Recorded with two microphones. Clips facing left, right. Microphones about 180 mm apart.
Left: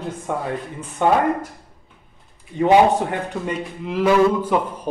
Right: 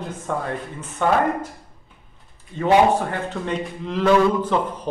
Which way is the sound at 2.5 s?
15° left (ahead or behind).